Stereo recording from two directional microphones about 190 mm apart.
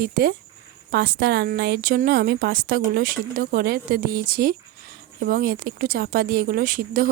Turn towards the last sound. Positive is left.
turn(degrees=-50)  # may be behind; listen again after turning